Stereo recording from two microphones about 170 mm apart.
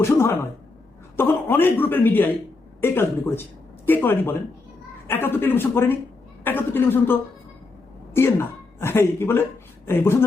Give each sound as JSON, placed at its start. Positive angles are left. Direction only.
{"t": 0.0, "sound": "speech", "side_deg": 15}